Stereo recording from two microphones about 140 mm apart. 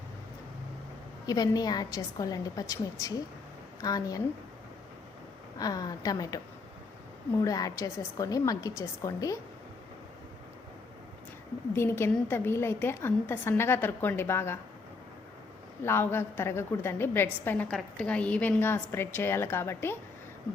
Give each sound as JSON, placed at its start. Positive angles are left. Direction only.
{"t": 1.3, "sound": "a woman's voice", "side_deg": 30}
{"t": 5.5, "sound": "a woman's voice", "side_deg": 25}
{"t": 11.7, "sound": "a woman's voice", "side_deg": 20}
{"t": 15.8, "sound": "a woman's voice", "side_deg": 15}
{"t": 17.7, "sound": "a woman's voice", "side_deg": 5}